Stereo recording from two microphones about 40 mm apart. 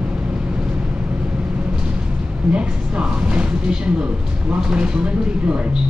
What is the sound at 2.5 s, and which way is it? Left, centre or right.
Speech, right.